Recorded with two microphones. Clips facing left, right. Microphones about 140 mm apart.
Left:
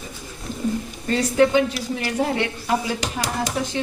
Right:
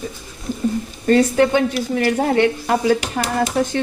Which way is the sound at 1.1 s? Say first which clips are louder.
Right 4 dB; 60° right (ahead or behind).